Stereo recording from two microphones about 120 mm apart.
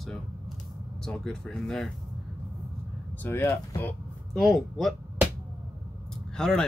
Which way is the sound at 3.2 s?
15° left (ahead or behind).